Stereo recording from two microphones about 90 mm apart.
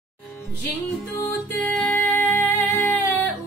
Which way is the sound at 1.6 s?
10° left (ahead or behind).